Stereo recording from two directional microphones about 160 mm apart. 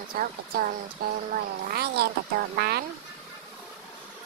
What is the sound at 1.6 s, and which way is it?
Speech, 80° right.